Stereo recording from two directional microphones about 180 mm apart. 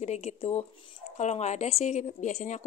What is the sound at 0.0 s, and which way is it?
Speech, 40° left (ahead or behind).